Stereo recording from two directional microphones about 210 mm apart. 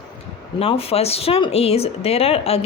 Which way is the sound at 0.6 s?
25° left (ahead or behind).